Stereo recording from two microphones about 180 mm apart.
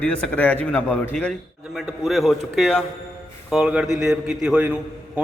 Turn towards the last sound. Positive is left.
turn(degrees=-10)  # may be behind; listen again after turning